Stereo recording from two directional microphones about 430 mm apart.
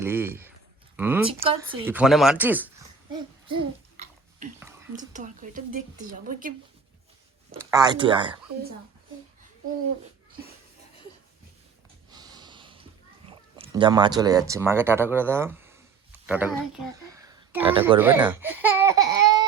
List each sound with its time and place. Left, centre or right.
0.0 s speech: centre
7.5 s speech: centre
12.1 s snort: centre
13.6 s speech: centre